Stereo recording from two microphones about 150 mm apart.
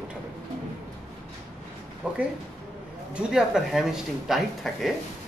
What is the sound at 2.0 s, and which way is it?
A man's voice, 5° right (ahead or behind).